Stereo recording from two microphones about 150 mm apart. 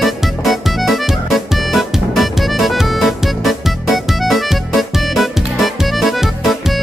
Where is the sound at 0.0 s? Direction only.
Centre (ahead or behind).